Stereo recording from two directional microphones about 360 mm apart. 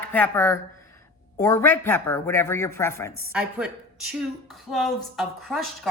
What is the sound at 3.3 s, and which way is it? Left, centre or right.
A woman's voice, centre.